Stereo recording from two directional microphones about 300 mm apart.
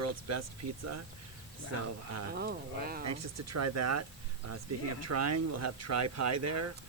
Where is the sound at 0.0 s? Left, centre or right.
Right.